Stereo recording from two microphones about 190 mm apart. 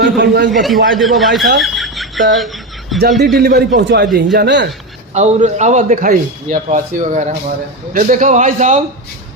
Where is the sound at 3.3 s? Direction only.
55° right (ahead or behind).